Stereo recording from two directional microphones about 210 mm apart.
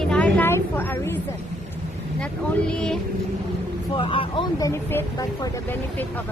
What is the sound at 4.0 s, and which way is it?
A woman's voice, 25° left (ahead or behind).